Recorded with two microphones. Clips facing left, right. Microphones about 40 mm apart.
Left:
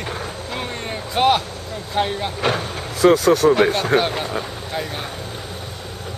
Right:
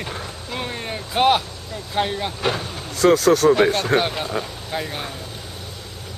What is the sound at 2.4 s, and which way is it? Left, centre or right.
Speech, left.